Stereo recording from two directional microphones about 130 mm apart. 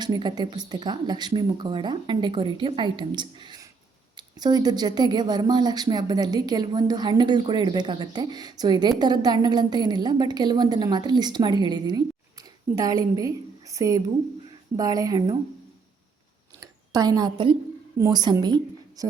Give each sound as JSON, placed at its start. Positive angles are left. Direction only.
{"t": 0.0, "sound": "a woman's voice", "side_deg": -30}
{"t": 16.6, "sound": "a woman's voice", "side_deg": -30}